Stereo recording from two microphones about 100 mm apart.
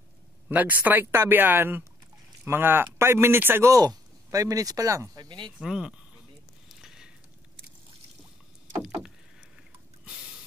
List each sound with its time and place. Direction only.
0.5 s speech: 15° right (ahead or behind)
3.7 s speech: 40° right (ahead or behind)
5.6 s speech: 5° right (ahead or behind)
6.7 s a sound: 5° right (ahead or behind)